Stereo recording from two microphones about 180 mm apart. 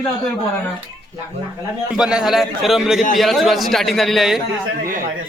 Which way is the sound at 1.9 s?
5° right (ahead or behind).